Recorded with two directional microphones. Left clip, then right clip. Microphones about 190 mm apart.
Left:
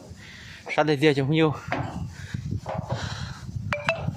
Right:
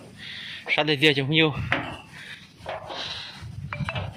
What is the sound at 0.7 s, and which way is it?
Speech, 15° left (ahead or behind).